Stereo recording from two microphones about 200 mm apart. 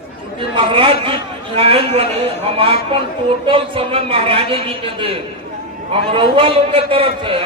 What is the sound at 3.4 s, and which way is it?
A man's voice, 25° right (ahead or behind).